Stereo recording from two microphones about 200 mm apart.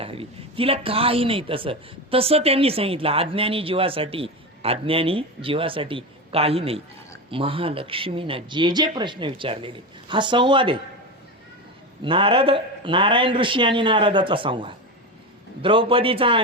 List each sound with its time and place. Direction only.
0.0 s a man's voice: 30° right (ahead or behind)
12.0 s a man's voice: 25° right (ahead or behind)